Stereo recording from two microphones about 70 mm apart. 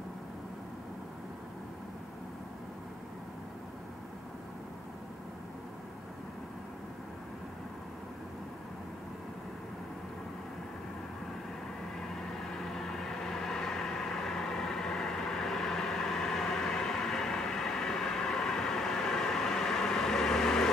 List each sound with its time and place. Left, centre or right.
12.2 s vehicle: centre